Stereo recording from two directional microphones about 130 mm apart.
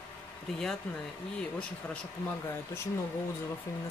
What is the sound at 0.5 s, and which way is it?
Speech, 5° left (ahead or behind).